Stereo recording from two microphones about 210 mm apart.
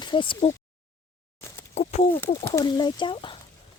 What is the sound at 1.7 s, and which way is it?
Speech, 35° left (ahead or behind).